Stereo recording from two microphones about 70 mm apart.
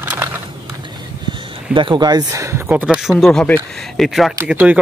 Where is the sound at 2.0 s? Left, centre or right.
Right.